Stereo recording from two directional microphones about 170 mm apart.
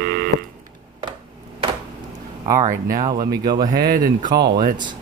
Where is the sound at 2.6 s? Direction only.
50° right (ahead or behind).